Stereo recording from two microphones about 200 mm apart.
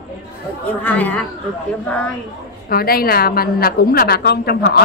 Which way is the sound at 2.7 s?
50° left (ahead or behind).